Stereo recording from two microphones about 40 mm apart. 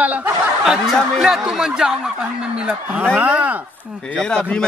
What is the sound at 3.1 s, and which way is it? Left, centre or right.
Speech, right.